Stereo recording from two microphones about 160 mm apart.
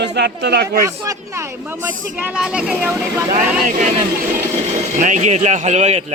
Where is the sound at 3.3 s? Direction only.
50° right (ahead or behind).